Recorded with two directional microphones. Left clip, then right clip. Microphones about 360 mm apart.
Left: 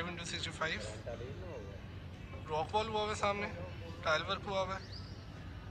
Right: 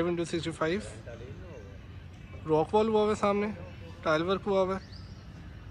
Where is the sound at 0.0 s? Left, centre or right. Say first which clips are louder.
Right 10 dB; centre.